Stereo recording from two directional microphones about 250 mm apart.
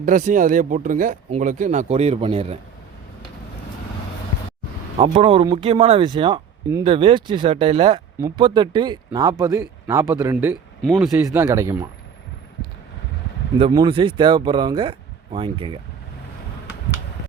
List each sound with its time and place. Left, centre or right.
0.0 s speech: right
4.9 s speech: right
10.8 s speech: centre
11.1 s speech: centre
13.6 s speech: centre